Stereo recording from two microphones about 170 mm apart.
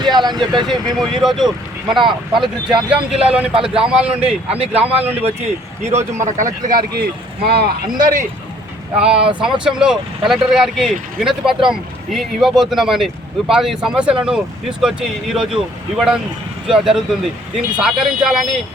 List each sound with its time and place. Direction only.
0.0 s speech: 25° right (ahead or behind)
0.7 s speech: centre (ahead or behind)
4.5 s speech: 35° right (ahead or behind)
4.9 s speech: 10° right (ahead or behind)
5.1 s speech: 35° right (ahead or behind)
9.0 s speech: 5° right (ahead or behind)